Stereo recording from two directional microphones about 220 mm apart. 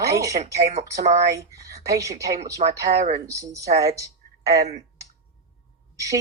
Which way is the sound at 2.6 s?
30° right (ahead or behind).